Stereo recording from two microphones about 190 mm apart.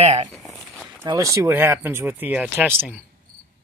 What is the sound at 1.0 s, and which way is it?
Speech, 15° right (ahead or behind).